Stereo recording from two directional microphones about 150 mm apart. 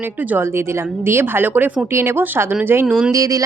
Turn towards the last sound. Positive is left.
turn(degrees=-25)  # may be behind; listen again after turning